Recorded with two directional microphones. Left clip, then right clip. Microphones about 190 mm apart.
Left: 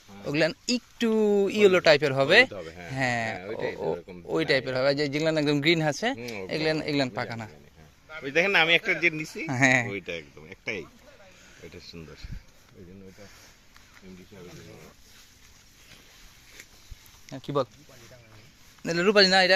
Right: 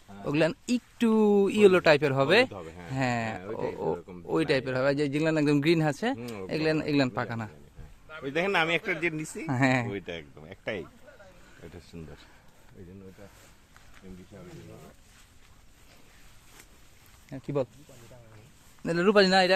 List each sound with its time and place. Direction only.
0.3 s speech: 25° right (ahead or behind)
9.5 s speech: 10° right (ahead or behind)
9.9 s speech: 25° right (ahead or behind)
17.2 s speech: 10° right (ahead or behind)
18.8 s speech: 15° right (ahead or behind)